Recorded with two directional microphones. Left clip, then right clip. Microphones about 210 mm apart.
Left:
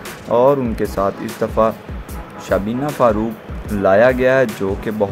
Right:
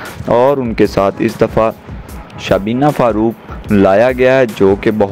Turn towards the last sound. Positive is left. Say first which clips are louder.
# right 11 dB
turn(degrees=-30)  # may be behind; listen again after turning